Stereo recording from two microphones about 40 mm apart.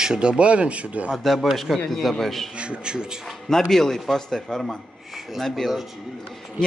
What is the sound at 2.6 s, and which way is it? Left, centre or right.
Speech, right.